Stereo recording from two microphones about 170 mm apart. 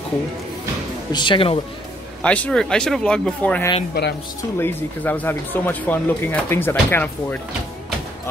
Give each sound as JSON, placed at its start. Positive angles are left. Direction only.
{"t": 1.1, "sound": "speech", "side_deg": 30}
{"t": 2.2, "sound": "speech", "side_deg": 10}
{"t": 3.9, "sound": "speech", "side_deg": 70}
{"t": 4.6, "sound": "speech", "side_deg": 10}